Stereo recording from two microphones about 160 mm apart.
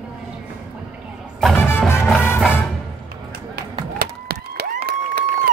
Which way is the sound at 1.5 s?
15° left (ahead or behind).